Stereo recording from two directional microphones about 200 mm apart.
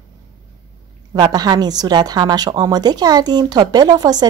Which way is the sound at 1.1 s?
20° right (ahead or behind).